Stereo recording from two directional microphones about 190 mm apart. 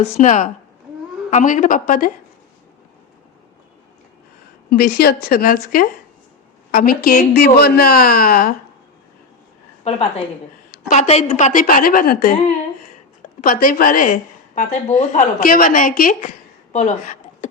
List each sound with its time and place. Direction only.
0.0 s a woman's voice: 40° left (ahead or behind)
4.7 s a woman's voice: 55° left (ahead or behind)
9.9 s a woman's voice: 35° left (ahead or behind); by 12.4 s 50° left (ahead or behind)
13.4 s a woman's voice: 50° left (ahead or behind)
16.7 s a sound: 40° left (ahead or behind)